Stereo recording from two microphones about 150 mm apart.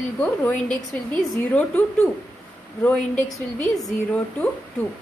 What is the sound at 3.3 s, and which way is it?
Speech, 20° left (ahead or behind).